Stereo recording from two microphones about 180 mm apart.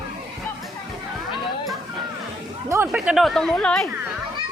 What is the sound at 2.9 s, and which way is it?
Speech, 5° right (ahead or behind).